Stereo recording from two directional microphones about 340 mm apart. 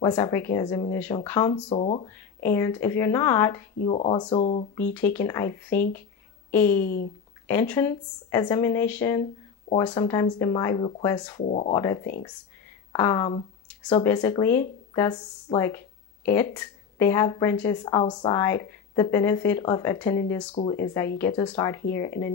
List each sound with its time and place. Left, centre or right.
0.0 s speech: centre
2.4 s speech: centre
4.9 s speech: centre
6.8 s speech: left
7.4 s speech: centre